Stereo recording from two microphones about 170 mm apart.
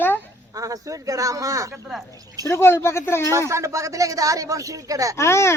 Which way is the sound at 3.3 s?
15° right (ahead or behind).